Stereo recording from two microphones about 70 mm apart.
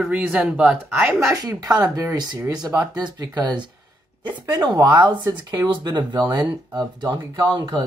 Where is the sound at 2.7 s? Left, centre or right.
Right.